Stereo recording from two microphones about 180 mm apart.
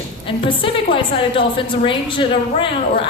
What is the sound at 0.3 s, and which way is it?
A woman's voice, 30° left (ahead or behind).